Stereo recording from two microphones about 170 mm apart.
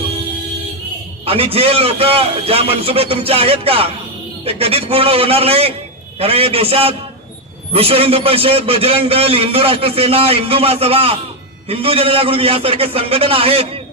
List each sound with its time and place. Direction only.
1.2 s a man's voice: 35° right (ahead or behind)